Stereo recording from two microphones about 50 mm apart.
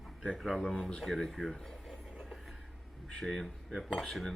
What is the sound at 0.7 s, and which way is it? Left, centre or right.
Speech, centre.